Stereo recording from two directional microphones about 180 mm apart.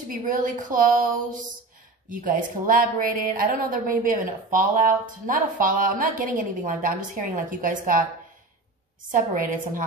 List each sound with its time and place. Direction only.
0.1 s a woman's voice: 50° right (ahead or behind)
9.1 s a woman's voice: 50° right (ahead or behind)